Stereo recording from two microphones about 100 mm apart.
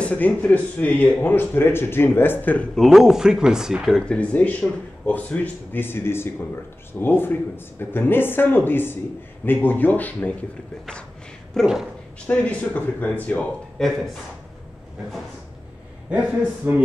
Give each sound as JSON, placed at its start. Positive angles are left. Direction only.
{"t": 0.0, "sound": "speech", "side_deg": 15}
{"t": 2.7, "sound": "speech", "side_deg": 0}
{"t": 4.0, "sound": "speech", "side_deg": 10}
{"t": 11.6, "sound": "speech", "side_deg": -5}
{"t": 12.3, "sound": "speech", "side_deg": 15}
{"t": 16.1, "sound": "a man's voice", "side_deg": -15}